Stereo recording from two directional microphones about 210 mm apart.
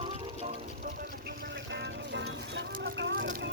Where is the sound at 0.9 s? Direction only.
50° right (ahead or behind).